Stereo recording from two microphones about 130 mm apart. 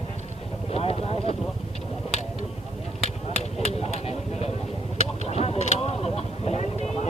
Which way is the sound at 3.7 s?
50° left (ahead or behind).